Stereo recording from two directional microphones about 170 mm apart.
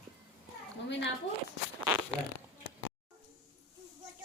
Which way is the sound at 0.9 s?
90° left.